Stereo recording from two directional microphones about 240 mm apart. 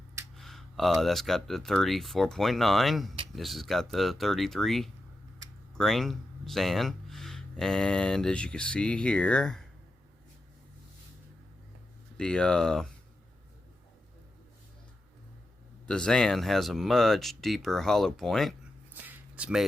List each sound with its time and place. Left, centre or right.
0.3 s speech: centre
12.1 s speech: centre
15.9 s speech: centre
19.0 s a sound: centre